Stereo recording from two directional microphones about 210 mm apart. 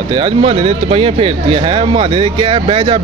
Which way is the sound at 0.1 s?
25° right (ahead or behind).